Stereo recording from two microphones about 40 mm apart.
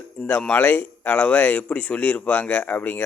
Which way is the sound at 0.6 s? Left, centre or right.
Left.